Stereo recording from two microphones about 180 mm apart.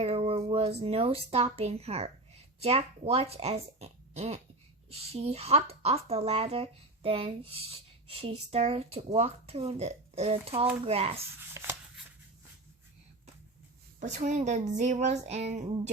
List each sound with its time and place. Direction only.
0.0 s music: 35° right (ahead or behind)
0.8 s speech: 35° right (ahead or behind)
11.3 s shuffling cards: 15° right (ahead or behind)
14.0 s speech: 40° right (ahead or behind)